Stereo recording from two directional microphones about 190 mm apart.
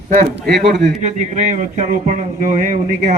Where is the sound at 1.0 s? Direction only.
35° right (ahead or behind).